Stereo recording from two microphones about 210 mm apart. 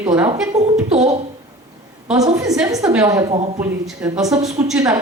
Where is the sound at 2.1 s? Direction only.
15° right (ahead or behind).